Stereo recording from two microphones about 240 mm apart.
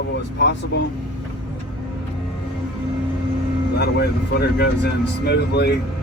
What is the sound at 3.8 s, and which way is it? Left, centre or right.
Speech, left.